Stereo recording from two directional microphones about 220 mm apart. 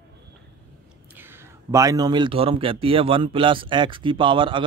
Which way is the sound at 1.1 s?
10° right (ahead or behind).